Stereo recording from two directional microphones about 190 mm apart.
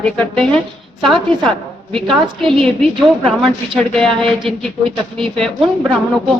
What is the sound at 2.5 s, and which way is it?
Speech, centre (ahead or behind).